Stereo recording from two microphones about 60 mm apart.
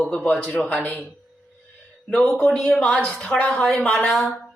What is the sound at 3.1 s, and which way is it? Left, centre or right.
Speech, left.